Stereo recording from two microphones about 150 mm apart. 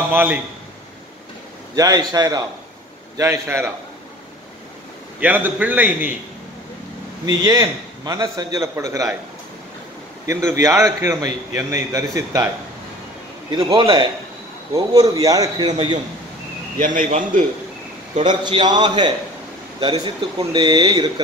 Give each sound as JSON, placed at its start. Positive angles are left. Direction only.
{"t": 0.1, "sound": "a man's voice", "side_deg": -10}
{"t": 1.8, "sound": "a man's voice", "side_deg": -25}
{"t": 5.2, "sound": "a man's voice", "side_deg": -10}
{"t": 7.2, "sound": "a man's voice", "side_deg": -25}
{"t": 10.2, "sound": "a man's voice", "side_deg": -20}
{"t": 13.5, "sound": "a man's voice", "side_deg": -35}
{"t": 14.7, "sound": "a man's voice", "side_deg": -25}
{"t": 16.7, "sound": "a man's voice", "side_deg": -60}
{"t": 18.4, "sound": "a man's voice", "side_deg": -30}